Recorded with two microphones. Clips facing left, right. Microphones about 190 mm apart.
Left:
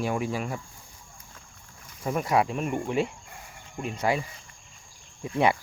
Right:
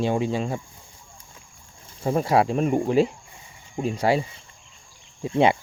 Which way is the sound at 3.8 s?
35° right (ahead or behind).